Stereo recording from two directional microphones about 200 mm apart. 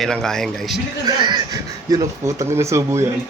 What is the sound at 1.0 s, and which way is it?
A man's voice, 20° right (ahead or behind).